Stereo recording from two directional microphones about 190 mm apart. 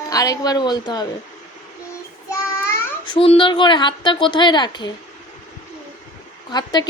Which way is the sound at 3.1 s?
30° left (ahead or behind).